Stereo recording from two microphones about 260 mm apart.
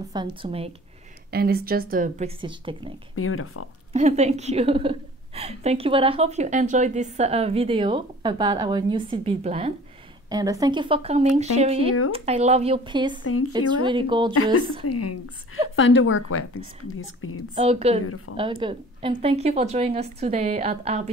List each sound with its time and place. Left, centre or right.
0.1 s a woman's voice: centre
1.3 s speech: right; by 2.9 s centre
3.2 s speech: left
3.9 s a woman's voice: right
13.2 s speech: left
13.5 s a woman's voice: centre
14.9 s speech: left
15.7 s speech: left
17.6 s a woman's voice: right
18.0 s speech: left
18.3 s a woman's voice: centre